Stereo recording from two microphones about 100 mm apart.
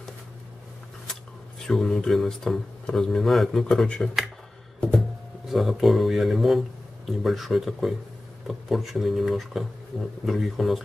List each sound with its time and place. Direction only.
1.7 s speech: 5° left (ahead or behind)
5.5 s speech: centre (ahead or behind)